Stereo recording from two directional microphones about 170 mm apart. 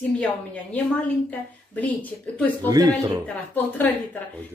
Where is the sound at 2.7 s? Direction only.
20° right (ahead or behind).